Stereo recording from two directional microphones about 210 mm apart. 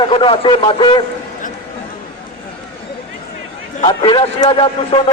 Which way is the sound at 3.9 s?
20° left (ahead or behind).